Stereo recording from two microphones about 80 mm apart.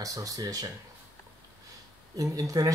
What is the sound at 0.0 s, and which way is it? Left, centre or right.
Speech, right.